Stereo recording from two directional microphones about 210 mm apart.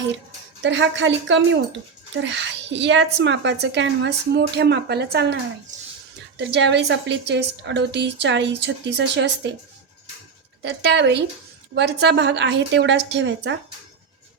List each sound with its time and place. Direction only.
0.6 s a woman's voice: 60° right (ahead or behind)
10.6 s a woman's voice: 55° right (ahead or behind)